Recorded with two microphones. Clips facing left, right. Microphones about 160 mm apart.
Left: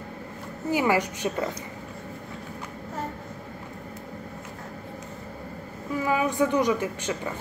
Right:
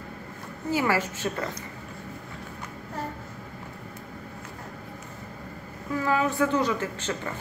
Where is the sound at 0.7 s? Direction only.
15° left (ahead or behind).